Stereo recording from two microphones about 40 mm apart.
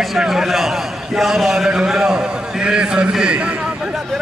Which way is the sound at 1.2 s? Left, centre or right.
Centre.